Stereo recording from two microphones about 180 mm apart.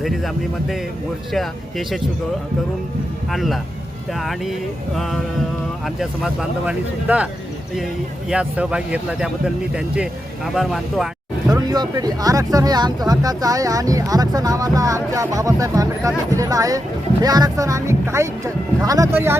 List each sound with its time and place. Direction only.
0.0 s speech: centre (ahead or behind)
3.3 s speech: centre (ahead or behind)
8.3 s speech: 5° right (ahead or behind)
11.5 s speech: 20° right (ahead or behind)